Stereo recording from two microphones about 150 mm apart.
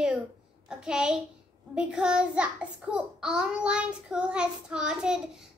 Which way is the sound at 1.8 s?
5° right (ahead or behind).